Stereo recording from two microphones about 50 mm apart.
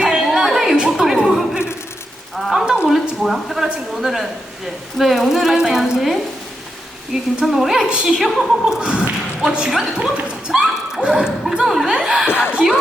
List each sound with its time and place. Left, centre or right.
0.0 s chatter: centre
2.3 s frying: centre
2.9 s speech: centre
8.9 s speech: right
9.6 s speech: centre
11.0 s speech: centre
11.6 s speech: centre
12.0 s speech: centre
12.3 s speech: left